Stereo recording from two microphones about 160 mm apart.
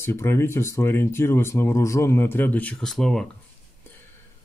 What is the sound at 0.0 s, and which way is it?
Speech, 15° left (ahead or behind).